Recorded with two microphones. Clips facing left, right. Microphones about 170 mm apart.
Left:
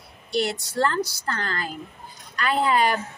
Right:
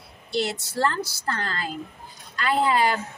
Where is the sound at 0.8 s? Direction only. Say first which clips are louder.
Left 2 dB; 30° right (ahead or behind).